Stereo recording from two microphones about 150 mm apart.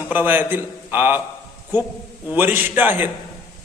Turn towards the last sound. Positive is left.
turn(degrees=-10)  # may be behind; listen again after turning